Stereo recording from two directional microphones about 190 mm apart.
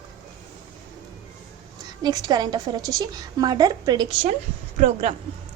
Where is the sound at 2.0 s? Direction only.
20° right (ahead or behind).